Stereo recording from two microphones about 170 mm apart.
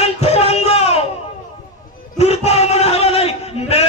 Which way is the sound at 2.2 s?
40° left (ahead or behind).